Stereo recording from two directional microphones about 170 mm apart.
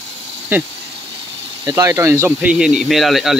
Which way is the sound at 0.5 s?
10° right (ahead or behind).